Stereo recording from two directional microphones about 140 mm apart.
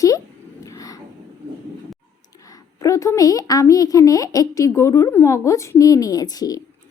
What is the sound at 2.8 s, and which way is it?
A woman's voice, 25° left (ahead or behind).